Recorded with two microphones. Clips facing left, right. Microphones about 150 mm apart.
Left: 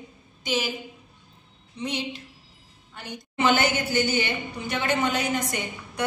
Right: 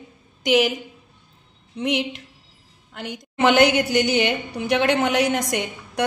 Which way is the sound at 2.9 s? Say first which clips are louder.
Right 3 dB; 85° right.